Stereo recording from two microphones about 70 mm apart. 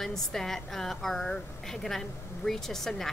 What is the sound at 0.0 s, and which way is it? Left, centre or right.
A woman's voice, centre.